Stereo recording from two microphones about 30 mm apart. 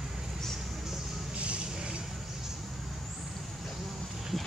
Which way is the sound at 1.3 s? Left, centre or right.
Right.